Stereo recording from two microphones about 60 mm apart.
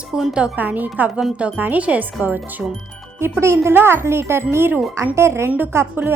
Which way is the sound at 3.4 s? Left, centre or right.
Right.